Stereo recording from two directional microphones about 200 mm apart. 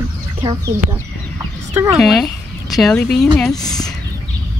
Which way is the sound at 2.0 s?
Centre (ahead or behind).